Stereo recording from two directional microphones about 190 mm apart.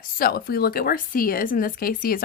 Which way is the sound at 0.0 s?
50° left (ahead or behind).